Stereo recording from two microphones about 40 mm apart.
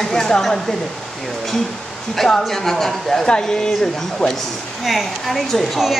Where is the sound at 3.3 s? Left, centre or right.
Centre.